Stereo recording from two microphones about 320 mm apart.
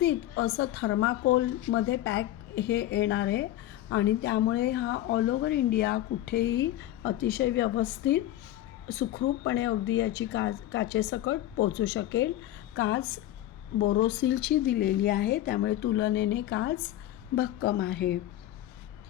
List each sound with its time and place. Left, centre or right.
0.0 s speech: left